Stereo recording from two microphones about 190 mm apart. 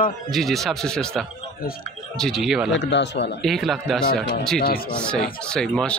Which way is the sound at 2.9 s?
65° left (ahead or behind).